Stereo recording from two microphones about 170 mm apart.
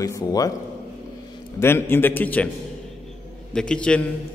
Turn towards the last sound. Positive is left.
turn(degrees=5)  # may be behind; listen again after turning